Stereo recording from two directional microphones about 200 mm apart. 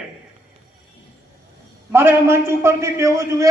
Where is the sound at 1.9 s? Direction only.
10° right (ahead or behind).